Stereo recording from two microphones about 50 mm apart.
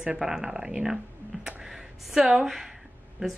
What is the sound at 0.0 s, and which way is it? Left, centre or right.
A woman's voice, centre.